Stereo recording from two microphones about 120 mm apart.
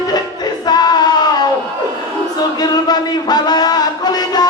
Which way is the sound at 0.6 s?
35° left (ahead or behind).